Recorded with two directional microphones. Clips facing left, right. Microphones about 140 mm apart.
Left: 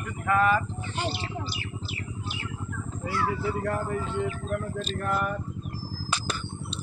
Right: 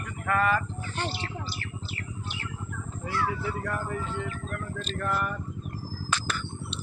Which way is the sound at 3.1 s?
10° left (ahead or behind).